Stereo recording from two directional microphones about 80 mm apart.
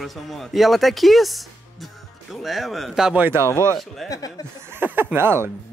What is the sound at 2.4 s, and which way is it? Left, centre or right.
Speech, centre.